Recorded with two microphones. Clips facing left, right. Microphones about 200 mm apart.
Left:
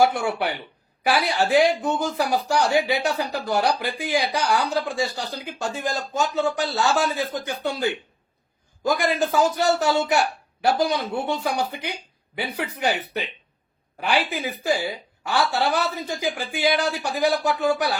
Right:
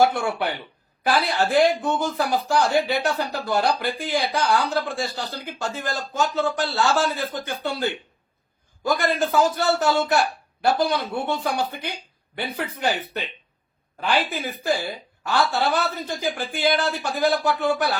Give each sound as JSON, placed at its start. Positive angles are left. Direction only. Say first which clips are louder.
{"t": 0.1, "sound": "speech", "louder": "even", "side_deg": 10}
{"t": 9.0, "sound": "speech", "louder": "right 1 dB", "side_deg": 15}